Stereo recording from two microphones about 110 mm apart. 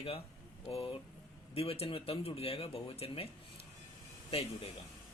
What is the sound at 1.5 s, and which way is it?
Speech, 65° left (ahead or behind).